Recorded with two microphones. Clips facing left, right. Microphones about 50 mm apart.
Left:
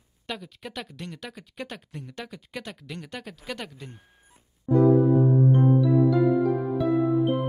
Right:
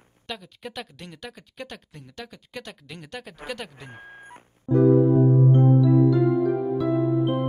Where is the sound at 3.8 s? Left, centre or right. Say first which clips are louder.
Right 5 dB; right.